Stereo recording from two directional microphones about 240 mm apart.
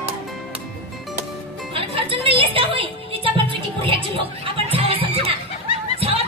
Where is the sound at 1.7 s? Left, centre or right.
Right.